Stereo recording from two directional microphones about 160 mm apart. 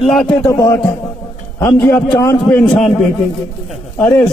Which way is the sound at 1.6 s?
10° left (ahead or behind).